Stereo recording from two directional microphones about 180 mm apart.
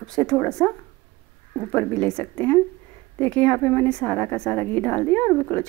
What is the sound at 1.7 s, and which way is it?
A woman's voice, 5° left (ahead or behind).